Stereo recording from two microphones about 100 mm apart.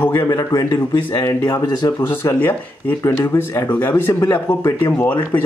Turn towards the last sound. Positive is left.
turn(degrees=15)  # may be behind; listen again after turning